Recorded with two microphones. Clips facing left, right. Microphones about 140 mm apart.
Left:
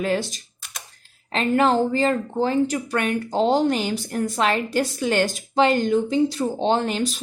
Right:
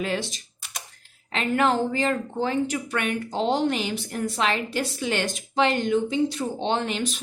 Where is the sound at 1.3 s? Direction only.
35° left (ahead or behind).